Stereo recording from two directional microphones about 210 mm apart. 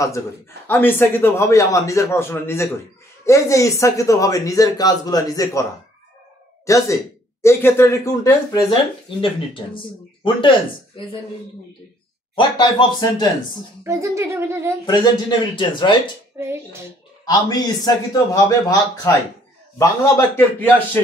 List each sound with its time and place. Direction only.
0.7 s speech: 10° left (ahead or behind)
12.4 s speech: 20° left (ahead or behind)
13.8 s speech: 15° right (ahead or behind)
14.9 s speech: 20° left (ahead or behind)
17.2 s speech: 20° left (ahead or behind)